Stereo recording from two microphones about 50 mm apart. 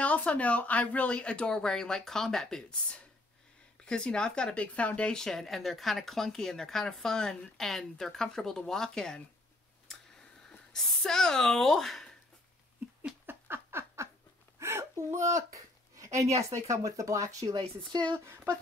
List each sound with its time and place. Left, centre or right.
0.0 s speech: left
5.2 s speech: centre
10.7 s speech: centre
13.3 s a sound: right
14.6 s a sound: right
16.0 s speech: right
18.2 s speech: right